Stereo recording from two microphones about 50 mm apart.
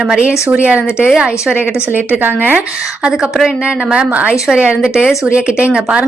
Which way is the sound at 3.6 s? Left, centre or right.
Right.